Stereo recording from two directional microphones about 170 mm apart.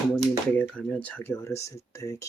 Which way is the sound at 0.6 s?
10° left (ahead or behind).